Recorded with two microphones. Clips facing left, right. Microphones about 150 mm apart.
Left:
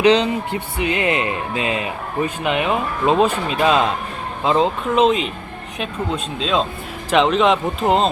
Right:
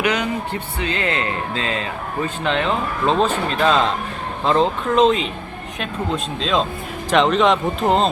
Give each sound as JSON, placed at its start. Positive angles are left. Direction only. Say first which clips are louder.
{"t": 0.0, "sound": "speech", "louder": "left 6 dB", "side_deg": 25}
{"t": 6.4, "sound": "speech", "louder": "left 1 dB", "side_deg": 0}